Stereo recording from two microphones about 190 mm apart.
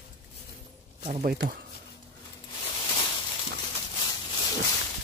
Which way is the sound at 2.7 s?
25° left (ahead or behind).